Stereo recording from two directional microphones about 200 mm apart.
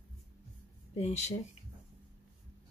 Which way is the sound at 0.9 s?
35° left (ahead or behind).